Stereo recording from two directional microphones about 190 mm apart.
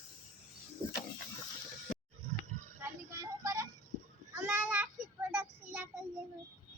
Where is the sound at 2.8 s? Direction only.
15° right (ahead or behind).